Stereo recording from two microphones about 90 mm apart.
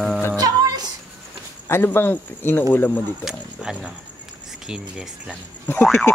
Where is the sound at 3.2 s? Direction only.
10° right (ahead or behind).